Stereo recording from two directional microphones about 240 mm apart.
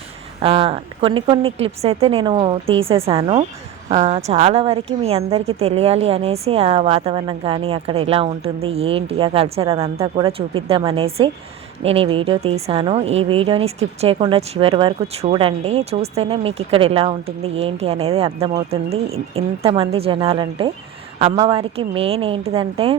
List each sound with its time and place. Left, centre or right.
0.4 s a woman's voice: right